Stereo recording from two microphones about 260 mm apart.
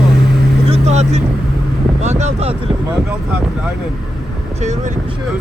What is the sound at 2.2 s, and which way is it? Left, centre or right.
Speech, right.